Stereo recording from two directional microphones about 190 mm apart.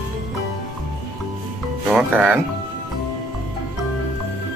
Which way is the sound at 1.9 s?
5° right (ahead or behind).